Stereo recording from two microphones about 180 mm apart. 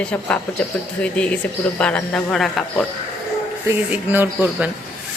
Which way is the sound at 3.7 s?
10° right (ahead or behind).